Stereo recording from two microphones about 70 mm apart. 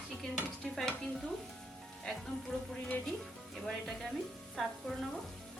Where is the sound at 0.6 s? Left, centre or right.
Centre.